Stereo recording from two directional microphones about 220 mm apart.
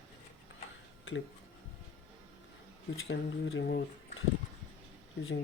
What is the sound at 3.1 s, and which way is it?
Speech, 60° left (ahead or behind).